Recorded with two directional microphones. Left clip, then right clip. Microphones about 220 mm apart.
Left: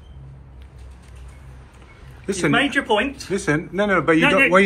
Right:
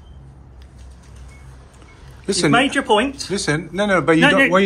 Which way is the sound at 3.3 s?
10° right (ahead or behind).